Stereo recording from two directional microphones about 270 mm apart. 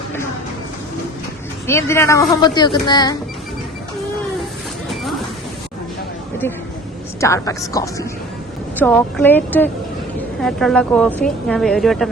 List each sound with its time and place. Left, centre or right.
1.6 s speech: centre
7.2 s a woman's voice: centre